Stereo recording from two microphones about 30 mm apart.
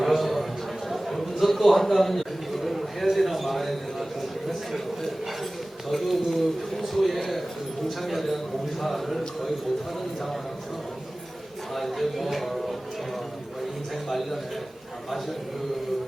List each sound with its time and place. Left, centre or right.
0.0 s a sound: centre
5.9 s a man's voice: centre
11.7 s speech: centre
14.1 s a man's voice: centre